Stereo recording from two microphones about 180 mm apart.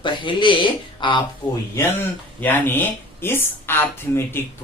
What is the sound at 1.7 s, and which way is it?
Speech, 10° left (ahead or behind).